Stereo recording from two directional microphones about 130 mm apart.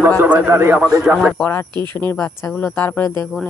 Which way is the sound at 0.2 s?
15° right (ahead or behind).